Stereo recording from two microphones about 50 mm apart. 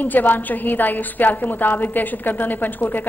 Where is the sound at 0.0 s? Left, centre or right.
Left.